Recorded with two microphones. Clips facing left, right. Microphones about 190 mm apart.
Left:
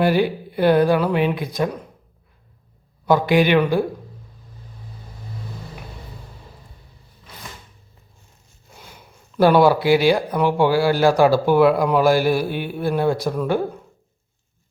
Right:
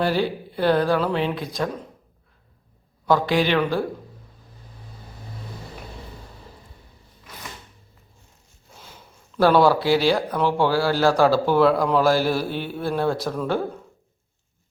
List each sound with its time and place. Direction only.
0.0 s speech: 15° left (ahead or behind)
3.1 s speech: 15° left (ahead or behind)
8.7 s speech: 10° left (ahead or behind)